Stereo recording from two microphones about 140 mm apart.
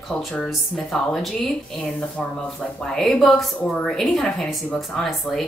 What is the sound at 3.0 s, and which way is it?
A woman's voice, 5° left (ahead or behind).